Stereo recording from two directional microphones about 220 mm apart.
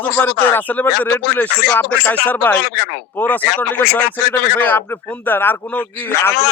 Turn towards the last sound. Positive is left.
turn(degrees=10)  # may be behind; listen again after turning